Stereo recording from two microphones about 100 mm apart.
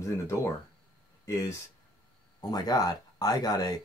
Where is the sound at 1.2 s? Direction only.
30° left (ahead or behind).